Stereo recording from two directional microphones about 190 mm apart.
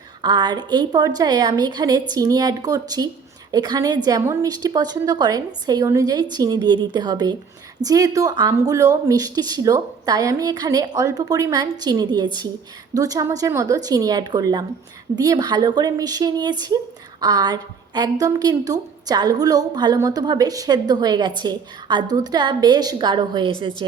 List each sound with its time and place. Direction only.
0.2 s speech: 25° right (ahead or behind)